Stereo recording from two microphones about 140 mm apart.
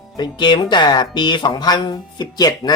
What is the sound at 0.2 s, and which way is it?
Speech, 35° left (ahead or behind).